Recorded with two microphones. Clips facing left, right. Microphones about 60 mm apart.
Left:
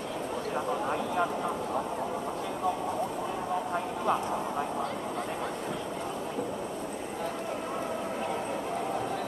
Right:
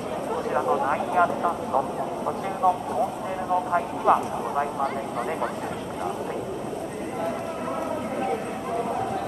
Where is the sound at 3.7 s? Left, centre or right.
Right.